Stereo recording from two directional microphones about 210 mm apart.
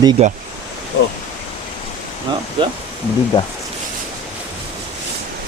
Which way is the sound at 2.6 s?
25° right (ahead or behind).